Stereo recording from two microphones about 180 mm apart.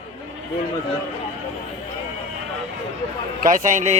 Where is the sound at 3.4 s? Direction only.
45° right (ahead or behind).